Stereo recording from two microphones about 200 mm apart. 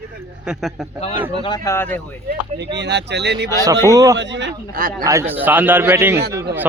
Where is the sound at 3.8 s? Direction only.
15° right (ahead or behind).